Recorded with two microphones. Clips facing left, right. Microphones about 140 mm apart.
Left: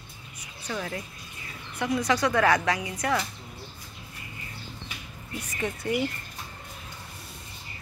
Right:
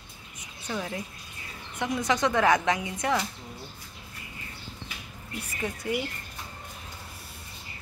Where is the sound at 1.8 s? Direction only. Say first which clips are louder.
Left 1 dB; 20° right (ahead or behind).